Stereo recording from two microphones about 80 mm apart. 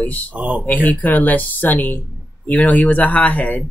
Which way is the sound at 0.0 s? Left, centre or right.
Centre.